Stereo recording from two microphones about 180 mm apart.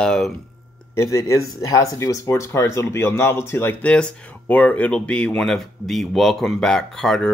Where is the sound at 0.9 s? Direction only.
20° left (ahead or behind).